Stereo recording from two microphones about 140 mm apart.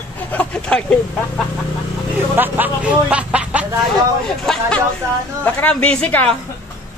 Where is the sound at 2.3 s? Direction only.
15° right (ahead or behind).